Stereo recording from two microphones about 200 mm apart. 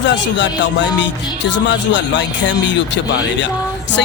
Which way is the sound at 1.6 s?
65° left (ahead or behind).